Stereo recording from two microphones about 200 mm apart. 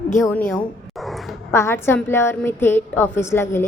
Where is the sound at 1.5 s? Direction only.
10° left (ahead or behind).